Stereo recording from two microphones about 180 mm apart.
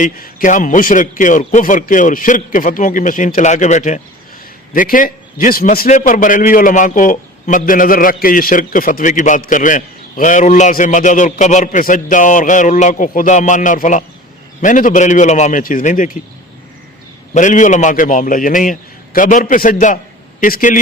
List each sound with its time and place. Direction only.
0.0 s a man's voice: 50° left (ahead or behind)
17.3 s a man's voice: 45° left (ahead or behind)